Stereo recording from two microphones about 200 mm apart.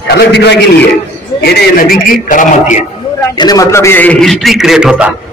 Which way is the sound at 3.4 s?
20° left (ahead or behind).